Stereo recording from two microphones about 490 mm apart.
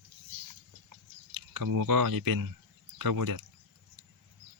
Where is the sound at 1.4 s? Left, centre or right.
Right.